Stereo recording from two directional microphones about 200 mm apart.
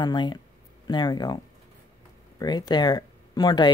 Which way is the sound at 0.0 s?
20° left (ahead or behind).